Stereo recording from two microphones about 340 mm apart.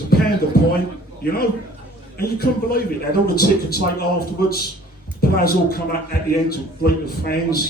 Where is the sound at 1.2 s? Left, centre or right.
Left.